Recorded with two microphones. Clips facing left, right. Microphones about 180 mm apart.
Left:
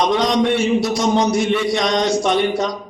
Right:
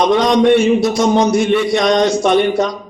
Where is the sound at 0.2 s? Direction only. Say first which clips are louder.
Right 6 dB; 55° right (ahead or behind).